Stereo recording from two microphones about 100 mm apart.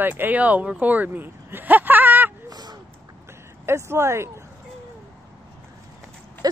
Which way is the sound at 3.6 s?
25° right (ahead or behind).